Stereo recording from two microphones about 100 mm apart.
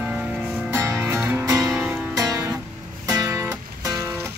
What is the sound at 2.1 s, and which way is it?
Music, 35° right (ahead or behind).